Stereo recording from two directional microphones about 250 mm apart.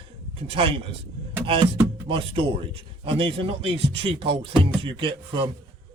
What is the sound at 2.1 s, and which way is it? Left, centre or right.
A man's voice, right.